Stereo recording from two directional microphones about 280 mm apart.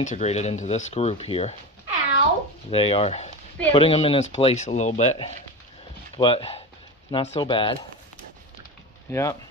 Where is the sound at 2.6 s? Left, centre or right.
Centre.